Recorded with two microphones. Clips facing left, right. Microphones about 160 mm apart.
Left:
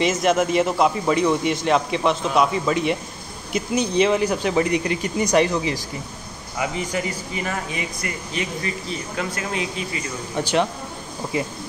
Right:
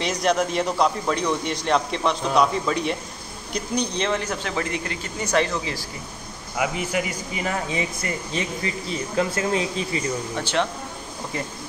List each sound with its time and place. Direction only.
0.0 s a man's voice: 5° left (ahead or behind)
6.6 s speech: 5° right (ahead or behind); by 9.8 s 30° right (ahead or behind)
10.3 s speech: 15° left (ahead or behind)